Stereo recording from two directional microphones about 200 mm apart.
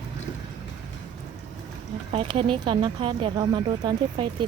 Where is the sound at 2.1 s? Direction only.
30° right (ahead or behind).